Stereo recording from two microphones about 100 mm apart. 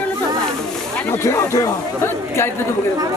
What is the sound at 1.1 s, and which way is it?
Speech, 25° left (ahead or behind).